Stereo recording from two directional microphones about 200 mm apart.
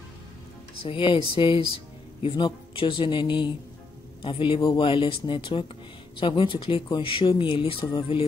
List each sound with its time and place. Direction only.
0.8 s speech: 25° left (ahead or behind)